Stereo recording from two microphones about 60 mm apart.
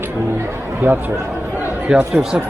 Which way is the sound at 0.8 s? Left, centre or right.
Right.